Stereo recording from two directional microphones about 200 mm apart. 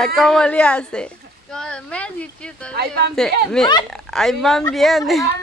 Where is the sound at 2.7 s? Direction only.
50° right (ahead or behind).